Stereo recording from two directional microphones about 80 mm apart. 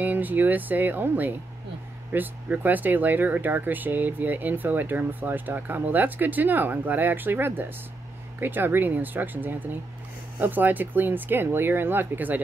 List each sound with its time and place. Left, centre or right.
0.0 s speech: right